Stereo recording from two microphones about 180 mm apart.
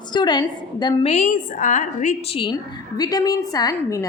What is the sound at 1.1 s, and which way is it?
A woman's voice, 45° left (ahead or behind).